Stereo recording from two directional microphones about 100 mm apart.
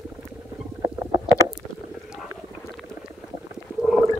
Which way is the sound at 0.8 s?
35° right (ahead or behind).